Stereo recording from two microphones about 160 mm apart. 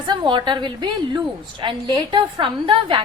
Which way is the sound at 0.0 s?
25° right (ahead or behind).